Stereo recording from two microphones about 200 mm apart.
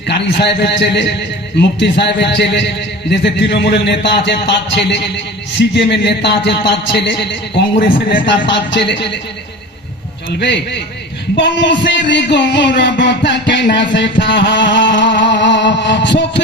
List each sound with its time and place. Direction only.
0.1 s a man's voice: 60° left (ahead or behind)
2.1 s a man's voice: 60° left (ahead or behind); by 8.3 s 45° left (ahead or behind)
8.3 s a man's voice: 65° left (ahead or behind)
10.2 s a man's voice: 60° left (ahead or behind)